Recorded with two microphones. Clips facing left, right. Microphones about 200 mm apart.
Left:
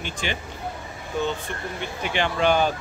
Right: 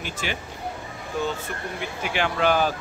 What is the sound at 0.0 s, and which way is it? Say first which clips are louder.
Speech: left 1 dB; 5° right (ahead or behind).